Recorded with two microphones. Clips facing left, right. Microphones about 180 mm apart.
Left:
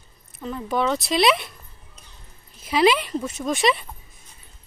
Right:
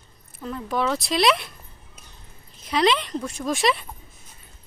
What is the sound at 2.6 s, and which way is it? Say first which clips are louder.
Speech: left 2 dB; 5° left (ahead or behind).